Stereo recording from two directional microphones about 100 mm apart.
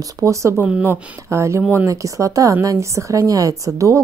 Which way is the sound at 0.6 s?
15° right (ahead or behind).